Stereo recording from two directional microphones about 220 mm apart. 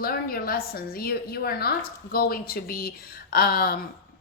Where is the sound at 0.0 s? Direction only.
40° left (ahead or behind).